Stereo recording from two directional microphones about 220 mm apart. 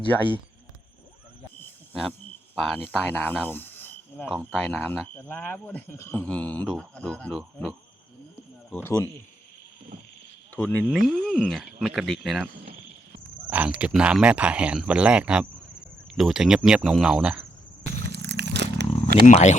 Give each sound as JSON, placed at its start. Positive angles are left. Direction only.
{"t": 1.5, "sound": "cricket", "side_deg": 10}
{"t": 4.3, "sound": "speech", "side_deg": 0}
{"t": 10.5, "sound": "speech", "side_deg": 5}
{"t": 13.5, "sound": "speech", "side_deg": -5}
{"t": 18.0, "sound": "a sound", "side_deg": -50}
{"t": 19.2, "sound": "speech", "side_deg": 35}